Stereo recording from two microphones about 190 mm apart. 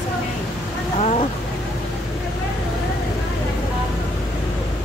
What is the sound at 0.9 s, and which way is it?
Speech, 35° left (ahead or behind).